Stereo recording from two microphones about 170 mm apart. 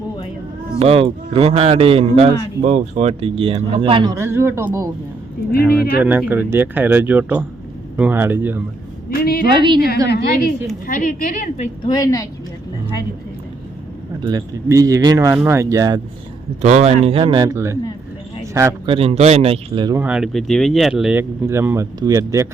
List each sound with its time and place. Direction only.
0.8 s speech: 35° right (ahead or behind)
4.2 s speech: 15° right (ahead or behind)
6.0 s speech: 10° right (ahead or behind)
9.0 s a woman's voice: 65° left (ahead or behind)
9.6 s speech: 25° right (ahead or behind)
10.1 s a woman's voice: 70° left (ahead or behind)
10.8 s a woman's voice: 55° left (ahead or behind)
11.9 s a woman's voice: 20° left (ahead or behind)
14.2 s speech: 25° right (ahead or behind)
16.6 s speech: 40° right (ahead or behind); by 17.7 s 20° right (ahead or behind)
18.9 s speech: 35° right (ahead or behind)
20.0 s speech: 5° right (ahead or behind)